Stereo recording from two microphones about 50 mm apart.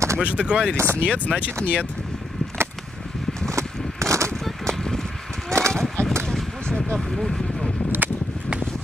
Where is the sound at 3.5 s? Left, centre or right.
Right.